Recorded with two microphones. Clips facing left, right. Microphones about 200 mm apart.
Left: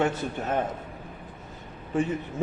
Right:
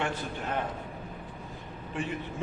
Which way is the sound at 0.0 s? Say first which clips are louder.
Left 6 dB; 45° left (ahead or behind).